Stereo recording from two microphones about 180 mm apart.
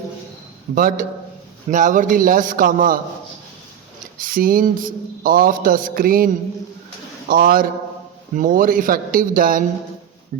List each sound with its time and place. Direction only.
0.8 s speech: 50° right (ahead or behind)
4.2 s speech: 50° right (ahead or behind)